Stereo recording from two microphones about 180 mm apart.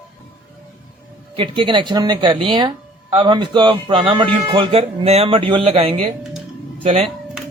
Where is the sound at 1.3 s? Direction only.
30° right (ahead or behind).